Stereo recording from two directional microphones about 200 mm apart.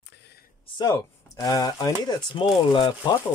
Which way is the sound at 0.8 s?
20° left (ahead or behind).